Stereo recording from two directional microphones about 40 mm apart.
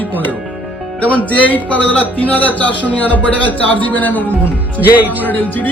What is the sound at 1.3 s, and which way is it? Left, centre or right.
A man's voice, left.